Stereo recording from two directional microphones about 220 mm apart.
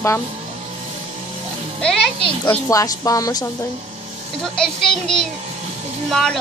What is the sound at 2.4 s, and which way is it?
Speech, 15° left (ahead or behind).